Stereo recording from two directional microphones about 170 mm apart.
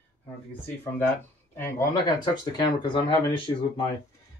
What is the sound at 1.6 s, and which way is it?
Speech, 20° left (ahead or behind).